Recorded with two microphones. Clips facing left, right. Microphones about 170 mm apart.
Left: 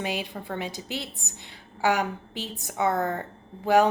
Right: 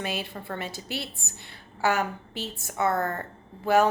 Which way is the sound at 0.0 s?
15° left (ahead or behind).